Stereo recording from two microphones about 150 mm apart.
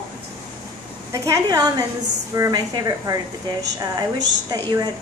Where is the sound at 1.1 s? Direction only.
20° right (ahead or behind).